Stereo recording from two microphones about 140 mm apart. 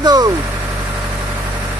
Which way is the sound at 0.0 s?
30° right (ahead or behind).